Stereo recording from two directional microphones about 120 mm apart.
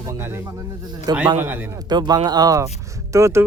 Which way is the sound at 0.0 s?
25° right (ahead or behind).